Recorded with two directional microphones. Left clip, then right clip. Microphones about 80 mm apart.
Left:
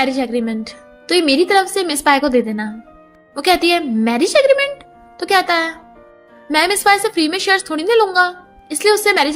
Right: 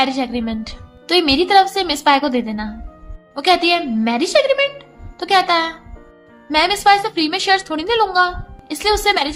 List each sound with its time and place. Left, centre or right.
0.2 s a woman's voice: left
1.0 s a woman's voice: left